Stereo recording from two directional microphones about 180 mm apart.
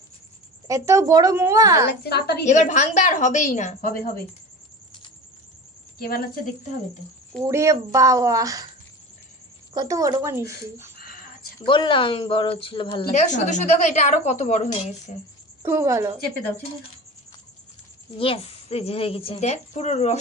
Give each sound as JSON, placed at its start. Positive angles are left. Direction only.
{"t": 0.7, "sound": "a woman's voice", "side_deg": -15}
{"t": 1.9, "sound": "a woman's voice", "side_deg": 65}
{"t": 2.4, "sound": "a woman's voice", "side_deg": 40}
{"t": 5.9, "sound": "a woman's voice", "side_deg": 55}
{"t": 7.4, "sound": "speech", "side_deg": -20}
{"t": 9.8, "sound": "a woman's voice", "side_deg": -20}
{"t": 11.0, "sound": "a sound", "side_deg": 55}
{"t": 11.6, "sound": "speech", "side_deg": 25}
{"t": 13.1, "sound": "a woman's voice", "side_deg": 40}
{"t": 15.6, "sound": "a woman's voice", "side_deg": -15}
{"t": 18.2, "sound": "a woman's voice", "side_deg": 30}